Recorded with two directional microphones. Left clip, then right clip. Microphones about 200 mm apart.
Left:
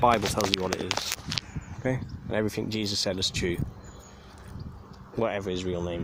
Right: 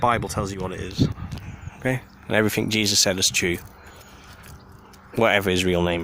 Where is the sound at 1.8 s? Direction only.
10° right (ahead or behind).